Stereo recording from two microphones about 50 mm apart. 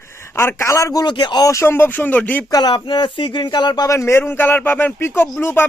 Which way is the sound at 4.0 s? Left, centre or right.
Left.